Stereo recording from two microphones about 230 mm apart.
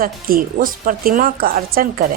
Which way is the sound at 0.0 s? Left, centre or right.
Right.